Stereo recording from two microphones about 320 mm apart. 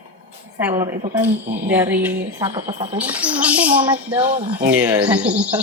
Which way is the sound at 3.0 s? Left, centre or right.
Centre.